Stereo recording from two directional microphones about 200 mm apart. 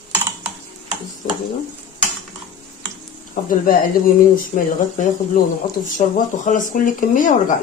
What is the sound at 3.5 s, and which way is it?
Speech, 45° left (ahead or behind).